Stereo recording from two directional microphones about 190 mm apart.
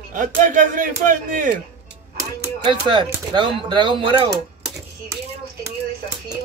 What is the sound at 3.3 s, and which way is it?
Speech, 25° right (ahead or behind).